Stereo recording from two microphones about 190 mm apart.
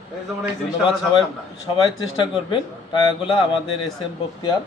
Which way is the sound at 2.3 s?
25° left (ahead or behind).